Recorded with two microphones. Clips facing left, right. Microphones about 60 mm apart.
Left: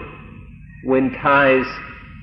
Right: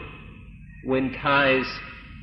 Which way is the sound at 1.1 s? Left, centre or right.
Left.